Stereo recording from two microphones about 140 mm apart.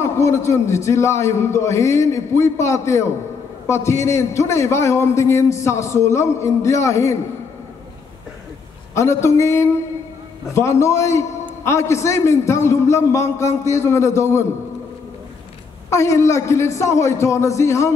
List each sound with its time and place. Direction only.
0.0 s a man's voice: 20° left (ahead or behind)
8.9 s a man's voice: 20° left (ahead or behind)
15.9 s a man's voice: 20° left (ahead or behind)